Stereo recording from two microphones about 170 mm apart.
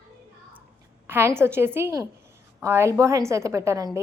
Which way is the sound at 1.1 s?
15° right (ahead or behind).